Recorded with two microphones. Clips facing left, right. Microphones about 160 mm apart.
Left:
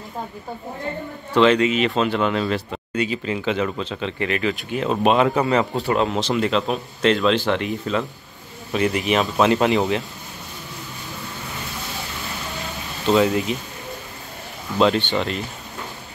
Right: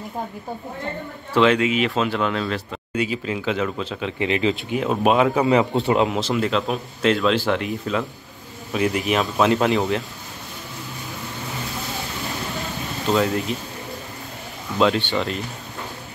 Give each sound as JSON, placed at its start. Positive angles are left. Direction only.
{"t": 1.3, "sound": "speech", "side_deg": -5}
{"t": 4.2, "sound": "speech", "side_deg": -20}
{"t": 4.7, "sound": "speech", "side_deg": -10}
{"t": 5.8, "sound": "speech", "side_deg": -20}
{"t": 6.1, "sound": "speech", "side_deg": 0}
{"t": 13.0, "sound": "speech", "side_deg": 0}
{"t": 14.8, "sound": "speech", "side_deg": 0}